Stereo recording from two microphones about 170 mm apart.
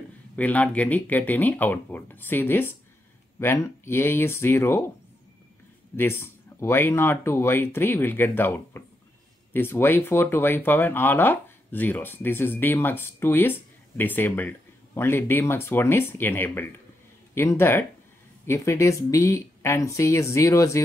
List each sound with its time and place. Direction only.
0.4 s speech: 10° left (ahead or behind)
5.9 s speech: 15° left (ahead or behind)